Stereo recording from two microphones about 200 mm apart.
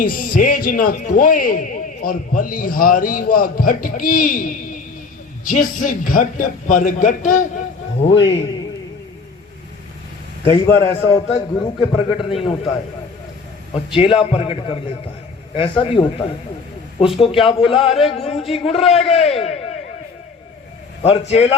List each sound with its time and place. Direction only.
0.0 s a man's voice: 45° left (ahead or behind)
10.4 s a man's voice: 15° left (ahead or behind)
11.3 s a man's voice: 25° left (ahead or behind)
13.7 s a man's voice: 25° left (ahead or behind)
21.0 s a man's voice: 30° left (ahead or behind)